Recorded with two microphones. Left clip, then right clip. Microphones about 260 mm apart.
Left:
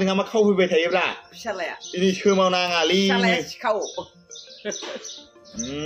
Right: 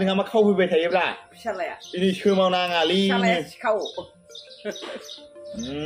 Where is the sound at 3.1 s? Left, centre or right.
Left.